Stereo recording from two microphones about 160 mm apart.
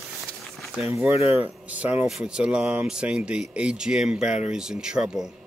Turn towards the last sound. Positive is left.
turn(degrees=-5)  # may be behind; listen again after turning